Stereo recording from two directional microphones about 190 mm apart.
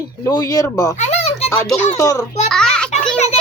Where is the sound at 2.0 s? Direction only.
15° left (ahead or behind).